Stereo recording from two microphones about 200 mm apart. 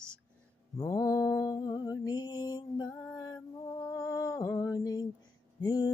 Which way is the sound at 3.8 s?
20° left (ahead or behind).